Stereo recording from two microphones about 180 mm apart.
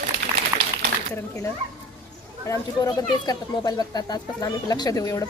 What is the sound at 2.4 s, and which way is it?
Speech, 15° left (ahead or behind).